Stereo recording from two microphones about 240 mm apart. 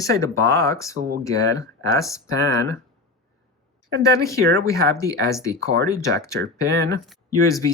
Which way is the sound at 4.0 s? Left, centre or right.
Centre.